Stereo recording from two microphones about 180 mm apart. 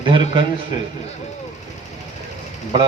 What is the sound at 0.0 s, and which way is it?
Speech, 25° right (ahead or behind).